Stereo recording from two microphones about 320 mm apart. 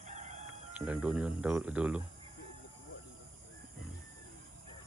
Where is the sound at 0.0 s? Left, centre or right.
Right.